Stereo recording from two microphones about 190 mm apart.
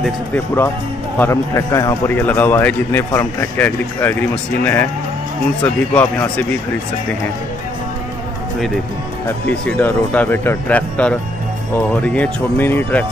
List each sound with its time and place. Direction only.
0.0 s a man's voice: 10° left (ahead or behind)
5.9 s a man's voice: 5° left (ahead or behind)
9.8 s a man's voice: 10° left (ahead or behind)